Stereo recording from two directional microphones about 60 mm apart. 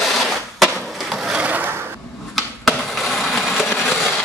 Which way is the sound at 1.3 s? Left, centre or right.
Right.